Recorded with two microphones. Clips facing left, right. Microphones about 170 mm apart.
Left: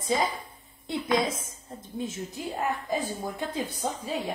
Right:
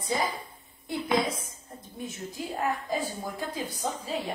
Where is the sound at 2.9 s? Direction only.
20° left (ahead or behind).